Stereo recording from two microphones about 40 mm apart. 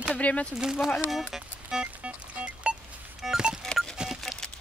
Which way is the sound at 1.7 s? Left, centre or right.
Right.